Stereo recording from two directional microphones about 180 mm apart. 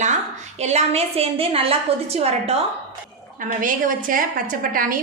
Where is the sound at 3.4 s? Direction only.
45° right (ahead or behind).